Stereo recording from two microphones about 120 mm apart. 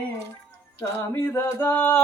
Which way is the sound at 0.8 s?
20° left (ahead or behind).